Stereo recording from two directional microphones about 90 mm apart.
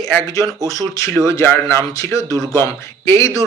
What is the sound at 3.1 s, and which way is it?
Speech, 35° left (ahead or behind).